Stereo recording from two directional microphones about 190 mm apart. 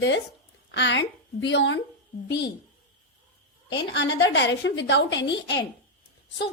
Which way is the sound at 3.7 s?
65° left (ahead or behind).